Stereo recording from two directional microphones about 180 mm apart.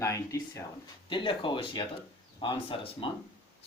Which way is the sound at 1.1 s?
30° left (ahead or behind).